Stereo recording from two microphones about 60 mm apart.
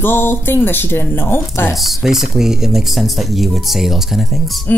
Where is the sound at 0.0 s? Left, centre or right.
Left.